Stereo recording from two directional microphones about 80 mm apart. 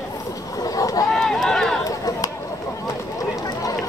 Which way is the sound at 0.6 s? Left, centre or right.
Left.